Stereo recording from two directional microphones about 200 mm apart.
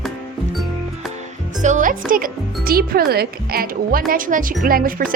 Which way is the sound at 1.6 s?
40° right (ahead or behind).